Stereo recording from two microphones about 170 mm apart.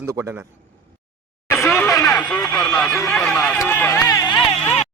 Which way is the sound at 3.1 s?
5° left (ahead or behind).